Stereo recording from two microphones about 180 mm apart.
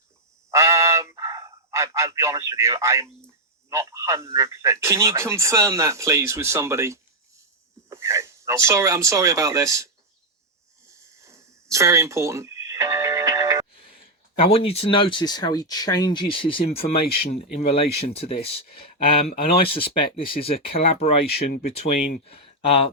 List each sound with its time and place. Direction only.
0.5 s a sound: 15° right (ahead or behind)
3.7 s speech: 15° right (ahead or behind)
11.2 s music: 15° right (ahead or behind)
13.7 s speech: 30° left (ahead or behind)
21.2 s speech: 60° left (ahead or behind)
22.2 s speech: 35° left (ahead or behind)